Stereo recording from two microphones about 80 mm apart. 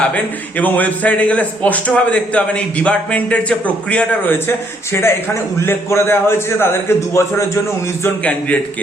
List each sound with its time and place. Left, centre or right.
0.1 s a man's voice: centre
4.4 s a man's voice: left
8.2 s a man's voice: centre